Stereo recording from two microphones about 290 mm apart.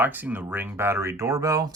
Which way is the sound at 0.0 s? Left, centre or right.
Centre.